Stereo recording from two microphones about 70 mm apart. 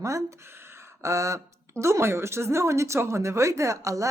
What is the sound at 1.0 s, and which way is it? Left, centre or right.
Speech, right.